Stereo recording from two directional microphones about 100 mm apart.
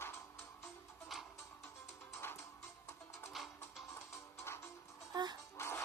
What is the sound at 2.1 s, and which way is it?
Music, 25° left (ahead or behind).